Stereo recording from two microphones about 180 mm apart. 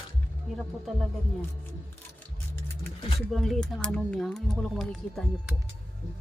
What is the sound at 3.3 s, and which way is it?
Speech, centre (ahead or behind).